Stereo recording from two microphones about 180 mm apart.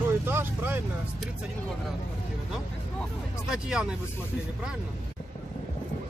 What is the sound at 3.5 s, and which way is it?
Speech, 5° right (ahead or behind).